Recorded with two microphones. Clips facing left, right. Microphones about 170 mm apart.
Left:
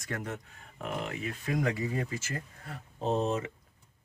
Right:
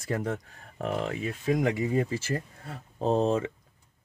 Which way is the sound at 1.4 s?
25° right (ahead or behind).